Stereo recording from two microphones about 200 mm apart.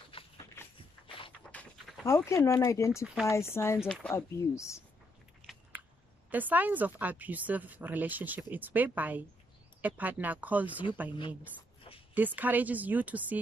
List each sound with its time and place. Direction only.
0.1 s a sound: 25° left (ahead or behind)
0.6 s a sound: 10° left (ahead or behind)
1.5 s speech: 5° left (ahead or behind)
6.3 s speech: 10° right (ahead or behind)
11.1 s a woman's voice: 25° left (ahead or behind)
12.1 s speech: 10° right (ahead or behind)